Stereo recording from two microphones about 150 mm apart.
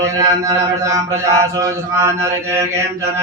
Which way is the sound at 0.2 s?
20° right (ahead or behind).